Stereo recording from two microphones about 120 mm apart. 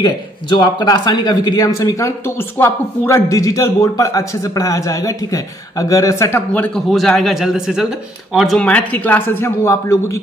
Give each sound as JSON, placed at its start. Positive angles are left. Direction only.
{"t": 0.0, "sound": "speech", "side_deg": 35}
{"t": 6.5, "sound": "a man's voice", "side_deg": 10}
{"t": 6.9, "sound": "a man's voice", "side_deg": 0}